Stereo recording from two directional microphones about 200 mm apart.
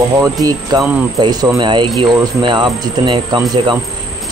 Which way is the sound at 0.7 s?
20° right (ahead or behind).